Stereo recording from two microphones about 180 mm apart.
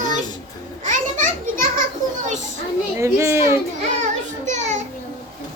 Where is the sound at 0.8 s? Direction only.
45° right (ahead or behind).